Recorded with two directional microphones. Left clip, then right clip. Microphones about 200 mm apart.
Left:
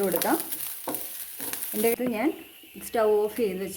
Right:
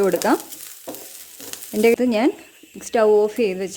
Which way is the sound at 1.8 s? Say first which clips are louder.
Right 9 dB; 50° right (ahead or behind).